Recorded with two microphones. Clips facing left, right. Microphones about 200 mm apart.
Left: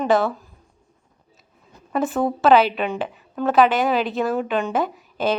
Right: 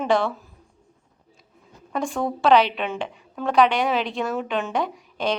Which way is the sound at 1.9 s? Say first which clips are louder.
Left 4 dB; 5° left (ahead or behind).